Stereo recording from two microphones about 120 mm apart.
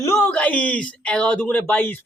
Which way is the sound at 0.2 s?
10° left (ahead or behind).